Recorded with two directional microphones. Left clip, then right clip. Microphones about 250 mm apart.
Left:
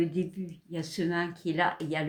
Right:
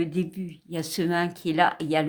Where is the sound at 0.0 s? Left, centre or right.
Right.